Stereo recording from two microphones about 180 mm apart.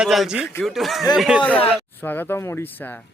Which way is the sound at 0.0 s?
5° right (ahead or behind).